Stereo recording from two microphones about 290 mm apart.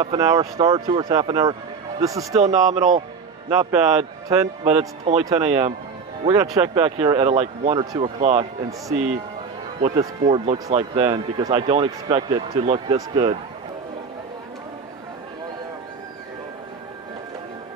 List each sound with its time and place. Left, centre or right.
0.0 s a man's voice: centre
2.4 s a man's voice: right
4.3 s a man's voice: centre
9.8 s a man's voice: right